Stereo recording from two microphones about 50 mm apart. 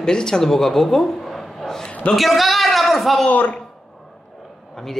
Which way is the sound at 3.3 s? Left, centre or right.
Left.